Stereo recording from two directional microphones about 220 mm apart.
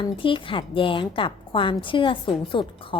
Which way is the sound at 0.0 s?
25° left (ahead or behind).